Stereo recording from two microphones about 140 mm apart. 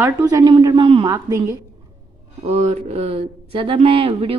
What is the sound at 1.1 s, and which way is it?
Speech, 25° right (ahead or behind).